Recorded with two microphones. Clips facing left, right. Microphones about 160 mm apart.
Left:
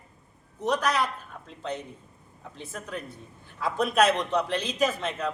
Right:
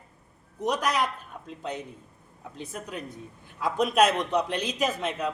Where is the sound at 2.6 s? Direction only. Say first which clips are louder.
Even; 15° right (ahead or behind).